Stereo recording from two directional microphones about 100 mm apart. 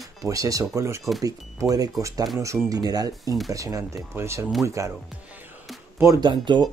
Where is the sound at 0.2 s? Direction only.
35° right (ahead or behind).